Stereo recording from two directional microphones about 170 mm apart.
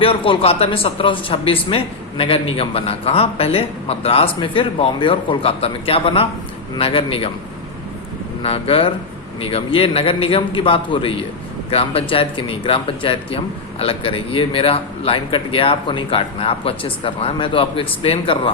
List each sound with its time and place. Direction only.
0.0 s speech: 30° left (ahead or behind)
8.4 s speech: 35° left (ahead or behind)